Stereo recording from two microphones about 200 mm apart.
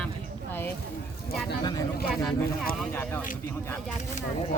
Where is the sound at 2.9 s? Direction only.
10° left (ahead or behind).